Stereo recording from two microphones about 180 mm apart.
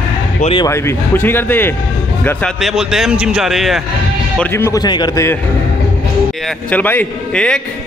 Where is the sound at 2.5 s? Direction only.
Centre (ahead or behind).